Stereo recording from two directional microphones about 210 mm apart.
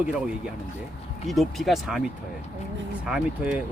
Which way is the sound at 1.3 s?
Centre (ahead or behind).